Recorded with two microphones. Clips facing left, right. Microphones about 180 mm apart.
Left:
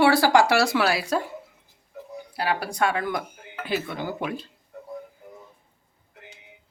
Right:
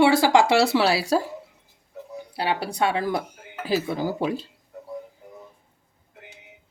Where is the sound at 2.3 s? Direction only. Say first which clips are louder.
Right 1 dB; 30° right (ahead or behind).